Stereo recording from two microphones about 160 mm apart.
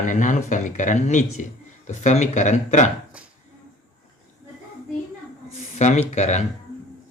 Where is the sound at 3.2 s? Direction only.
5° right (ahead or behind).